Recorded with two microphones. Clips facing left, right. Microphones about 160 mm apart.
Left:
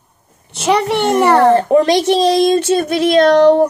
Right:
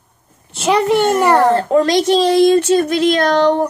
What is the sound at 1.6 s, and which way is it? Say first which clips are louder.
Speech: left 2 dB; 20° left (ahead or behind).